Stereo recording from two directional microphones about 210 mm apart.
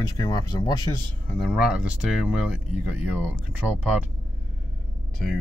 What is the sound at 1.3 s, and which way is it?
Speech, centre (ahead or behind).